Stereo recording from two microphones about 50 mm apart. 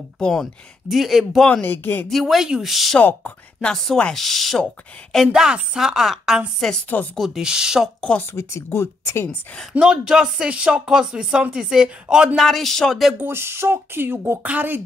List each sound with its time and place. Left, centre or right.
0.2 s speech: centre
0.8 s a man's voice: centre
1.7 s speech: left
2.0 s a man's voice: centre
3.0 s speech: left
3.7 s a man's voice: centre
5.3 s speech: centre
6.6 s a man's voice: centre
7.4 s speech: centre
8.4 s a woman's voice: left
9.8 s speech: centre
12.4 s a man's voice: centre
13.2 s speech: right
14.4 s speech: right